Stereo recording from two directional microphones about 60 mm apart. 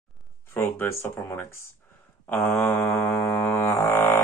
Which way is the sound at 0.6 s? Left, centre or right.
Left.